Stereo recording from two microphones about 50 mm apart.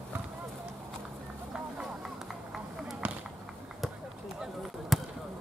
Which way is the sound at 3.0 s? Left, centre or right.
Right.